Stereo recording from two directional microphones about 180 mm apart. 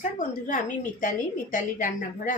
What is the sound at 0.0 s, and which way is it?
Speech, 45° left (ahead or behind).